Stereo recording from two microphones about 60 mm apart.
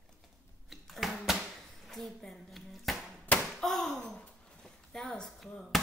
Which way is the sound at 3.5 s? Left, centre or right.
Centre.